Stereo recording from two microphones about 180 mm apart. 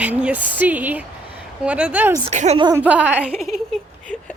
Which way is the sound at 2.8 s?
10° right (ahead or behind).